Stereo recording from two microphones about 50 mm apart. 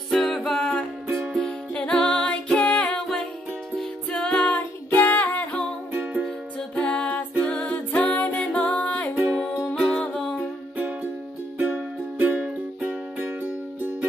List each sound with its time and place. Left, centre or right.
0.1 s ukulele: centre
0.5 s music: centre
1.1 s music: centre
1.4 s music: centre
4.1 s music: centre
4.5 s music: left
6.7 s music: left
8.3 s music: centre
9.1 s music: centre
11.5 s music: right